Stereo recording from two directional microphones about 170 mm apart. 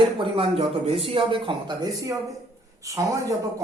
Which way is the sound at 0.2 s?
35° right (ahead or behind).